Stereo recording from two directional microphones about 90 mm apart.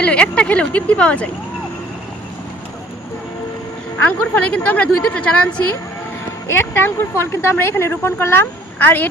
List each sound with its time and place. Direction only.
0.0 s a woman's voice: 10° left (ahead or behind)
4.0 s a woman's voice: 20° left (ahead or behind)
6.5 s speech: 25° left (ahead or behind)